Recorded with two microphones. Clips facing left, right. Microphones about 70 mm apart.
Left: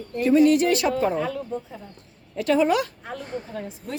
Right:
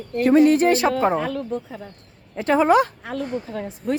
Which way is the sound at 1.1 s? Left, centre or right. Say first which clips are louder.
Right 3 dB; right.